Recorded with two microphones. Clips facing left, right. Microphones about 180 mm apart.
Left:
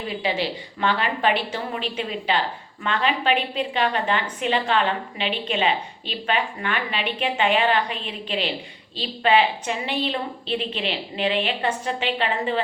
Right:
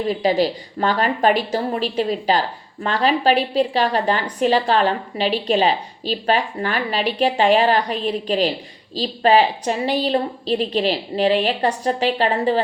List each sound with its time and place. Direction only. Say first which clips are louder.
0.1 s a woman's voice: right 7 dB; 40° right (ahead or behind)